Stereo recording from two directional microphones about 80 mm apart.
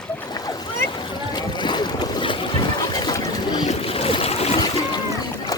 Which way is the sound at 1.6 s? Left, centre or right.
Left.